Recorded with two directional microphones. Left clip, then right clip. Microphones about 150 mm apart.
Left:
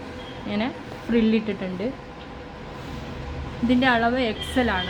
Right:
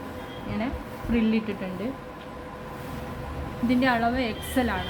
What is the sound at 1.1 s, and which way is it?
Speech, 90° left.